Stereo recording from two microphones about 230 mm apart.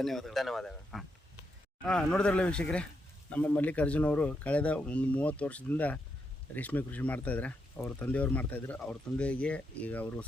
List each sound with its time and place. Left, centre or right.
0.0 s speech: centre